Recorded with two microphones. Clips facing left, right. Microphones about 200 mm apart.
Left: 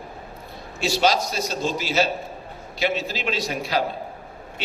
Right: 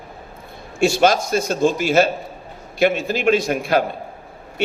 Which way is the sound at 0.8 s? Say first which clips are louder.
Right 5 dB; 50° right (ahead or behind).